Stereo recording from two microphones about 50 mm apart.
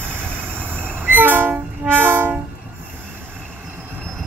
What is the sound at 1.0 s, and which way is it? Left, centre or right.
Train, right.